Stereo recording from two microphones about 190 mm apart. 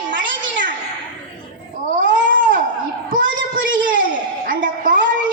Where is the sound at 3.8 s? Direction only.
45° right (ahead or behind).